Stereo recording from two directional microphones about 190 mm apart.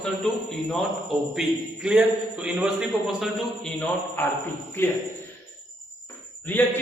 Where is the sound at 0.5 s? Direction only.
Centre (ahead or behind).